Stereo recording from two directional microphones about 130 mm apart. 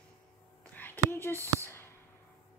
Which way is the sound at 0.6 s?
15° left (ahead or behind).